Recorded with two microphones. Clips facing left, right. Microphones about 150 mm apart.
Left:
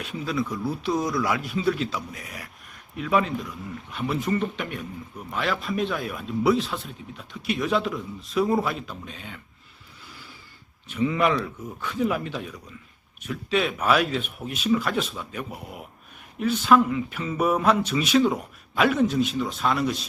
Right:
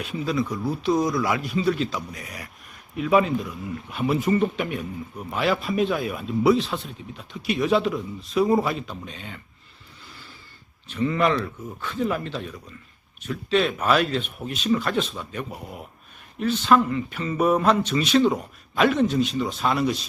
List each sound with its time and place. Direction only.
0.0 s speech: centre (ahead or behind)
10.8 s speech: 10° left (ahead or behind)